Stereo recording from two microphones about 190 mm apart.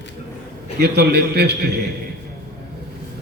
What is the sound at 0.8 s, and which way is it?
A man's voice, 60° right (ahead or behind).